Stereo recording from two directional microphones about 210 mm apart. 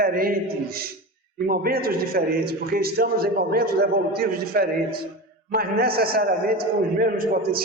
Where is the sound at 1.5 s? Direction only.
45° right (ahead or behind).